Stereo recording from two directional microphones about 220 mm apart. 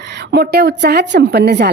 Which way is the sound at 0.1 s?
50° right (ahead or behind).